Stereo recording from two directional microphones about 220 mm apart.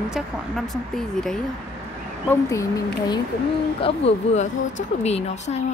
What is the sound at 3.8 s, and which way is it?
Speech, 30° left (ahead or behind).